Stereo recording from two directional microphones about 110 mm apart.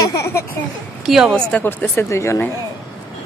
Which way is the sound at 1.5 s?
15° left (ahead or behind).